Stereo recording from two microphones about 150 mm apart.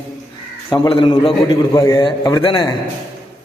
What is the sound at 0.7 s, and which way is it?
Speech, 35° left (ahead or behind).